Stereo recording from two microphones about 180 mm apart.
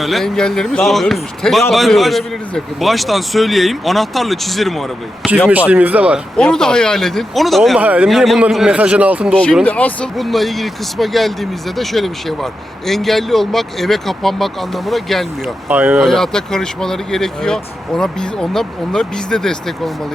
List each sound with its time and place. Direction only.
0.0 s speech: centre (ahead or behind)
6.3 s speech: 5° left (ahead or behind)
9.3 s speech: 5° left (ahead or behind)
16.0 s speech: centre (ahead or behind)